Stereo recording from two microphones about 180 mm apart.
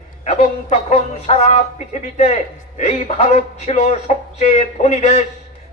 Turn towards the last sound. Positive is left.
turn(degrees=35)  # may be behind; listen again after turning